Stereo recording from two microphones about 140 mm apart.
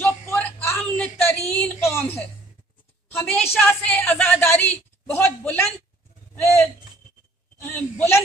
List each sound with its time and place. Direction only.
0.3 s a sound: 15° left (ahead or behind)
3.1 s a woman's voice: 10° left (ahead or behind)
7.7 s a woman's voice: 15° left (ahead or behind)